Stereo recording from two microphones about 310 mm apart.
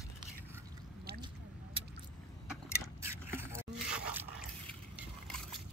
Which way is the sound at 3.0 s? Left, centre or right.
Centre.